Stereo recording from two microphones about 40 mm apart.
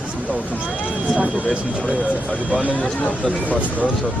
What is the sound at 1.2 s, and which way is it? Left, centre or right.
Speech, right.